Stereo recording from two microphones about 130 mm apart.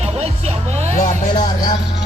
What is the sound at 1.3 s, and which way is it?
Music, 30° left (ahead or behind).